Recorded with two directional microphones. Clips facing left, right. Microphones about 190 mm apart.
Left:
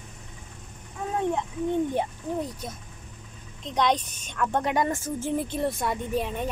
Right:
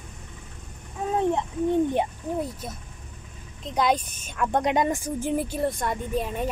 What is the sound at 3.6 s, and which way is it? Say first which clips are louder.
A woman's voice: right 1 dB; 5° right (ahead or behind).